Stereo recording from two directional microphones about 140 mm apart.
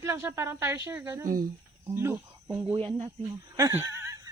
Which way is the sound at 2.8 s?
40° right (ahead or behind).